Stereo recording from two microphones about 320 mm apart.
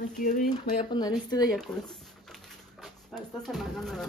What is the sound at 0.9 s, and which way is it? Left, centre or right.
Speech, centre.